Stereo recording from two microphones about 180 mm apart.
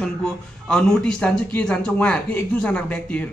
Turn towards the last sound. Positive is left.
turn(degrees=10)  # may be behind; listen again after turning